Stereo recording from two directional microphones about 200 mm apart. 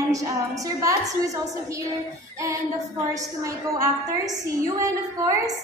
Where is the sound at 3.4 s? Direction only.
15° right (ahead or behind).